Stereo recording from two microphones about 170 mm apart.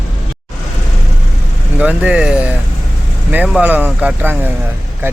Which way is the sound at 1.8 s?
10° right (ahead or behind).